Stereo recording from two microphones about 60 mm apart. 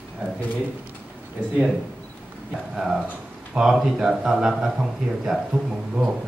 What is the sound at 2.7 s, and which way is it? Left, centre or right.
A man's voice, centre.